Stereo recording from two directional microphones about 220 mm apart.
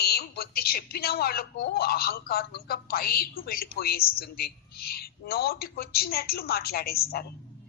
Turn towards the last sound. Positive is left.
turn(degrees=45)  # may be behind; listen again after turning